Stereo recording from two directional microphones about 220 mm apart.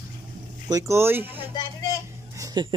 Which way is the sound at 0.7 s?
15° right (ahead or behind).